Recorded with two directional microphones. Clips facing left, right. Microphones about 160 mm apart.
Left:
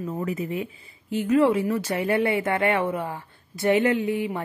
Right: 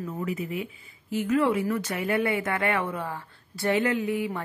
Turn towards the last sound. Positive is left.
turn(degrees=25)  # may be behind; listen again after turning